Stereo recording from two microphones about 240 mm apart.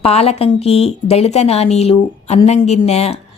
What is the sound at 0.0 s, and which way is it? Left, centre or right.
A woman's voice, left.